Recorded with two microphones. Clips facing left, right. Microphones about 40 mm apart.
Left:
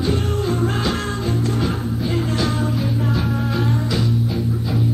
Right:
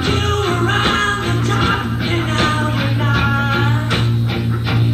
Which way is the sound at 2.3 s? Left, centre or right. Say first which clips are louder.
Right 4 dB; right.